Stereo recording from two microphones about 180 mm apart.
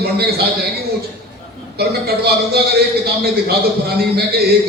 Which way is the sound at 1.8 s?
60° right (ahead or behind).